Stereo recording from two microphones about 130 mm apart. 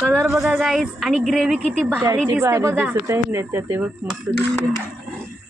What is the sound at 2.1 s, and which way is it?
Speech, 15° right (ahead or behind).